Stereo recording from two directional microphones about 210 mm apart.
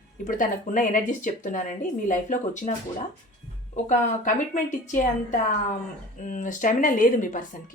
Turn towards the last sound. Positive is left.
turn(degrees=40)  # may be behind; listen again after turning